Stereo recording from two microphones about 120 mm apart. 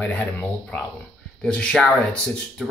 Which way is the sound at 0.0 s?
15° left (ahead or behind).